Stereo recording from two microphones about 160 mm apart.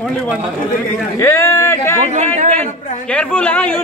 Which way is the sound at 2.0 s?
45° right (ahead or behind).